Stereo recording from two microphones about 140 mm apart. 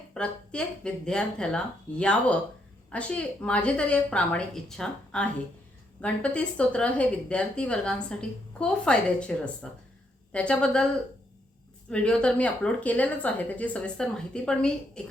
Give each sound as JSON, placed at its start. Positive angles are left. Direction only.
{"t": 0.1, "sound": "a woman's voice", "side_deg": 5}
{"t": 11.9, "sound": "a woman's voice", "side_deg": 5}